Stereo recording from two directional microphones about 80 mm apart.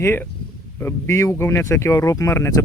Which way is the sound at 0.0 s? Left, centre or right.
Left.